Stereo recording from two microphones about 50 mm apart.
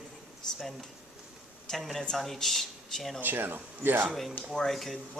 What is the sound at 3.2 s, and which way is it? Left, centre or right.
Speech, right.